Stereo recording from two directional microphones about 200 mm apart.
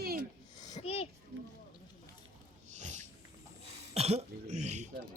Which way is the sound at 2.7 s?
35° right (ahead or behind).